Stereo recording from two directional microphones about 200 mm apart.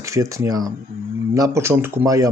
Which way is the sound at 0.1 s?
15° right (ahead or behind).